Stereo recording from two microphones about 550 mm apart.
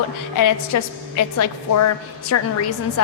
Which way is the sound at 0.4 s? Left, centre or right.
Left.